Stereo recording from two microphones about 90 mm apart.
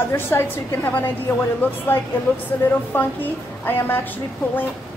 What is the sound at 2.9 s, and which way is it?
A woman's voice, 25° left (ahead or behind).